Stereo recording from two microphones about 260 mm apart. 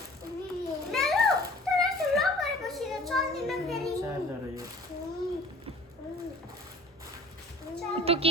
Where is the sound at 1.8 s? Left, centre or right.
Centre.